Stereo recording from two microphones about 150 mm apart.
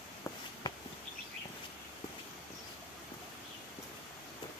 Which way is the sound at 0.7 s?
25° left (ahead or behind).